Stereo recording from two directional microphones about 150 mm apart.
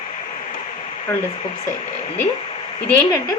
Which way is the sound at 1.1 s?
20° left (ahead or behind).